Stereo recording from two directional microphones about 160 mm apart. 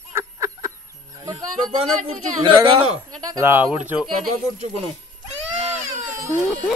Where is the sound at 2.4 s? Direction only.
30° right (ahead or behind).